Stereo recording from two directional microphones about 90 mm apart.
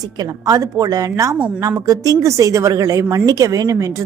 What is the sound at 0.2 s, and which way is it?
A woman's voice, 40° right (ahead or behind).